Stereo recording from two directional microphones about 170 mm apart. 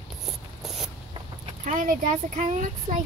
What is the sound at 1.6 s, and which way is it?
Speech, 50° right (ahead or behind).